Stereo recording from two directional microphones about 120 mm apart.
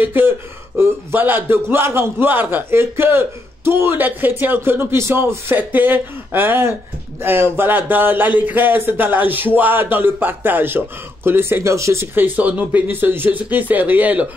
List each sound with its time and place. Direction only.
0.0 s a man's voice: 15° right (ahead or behind)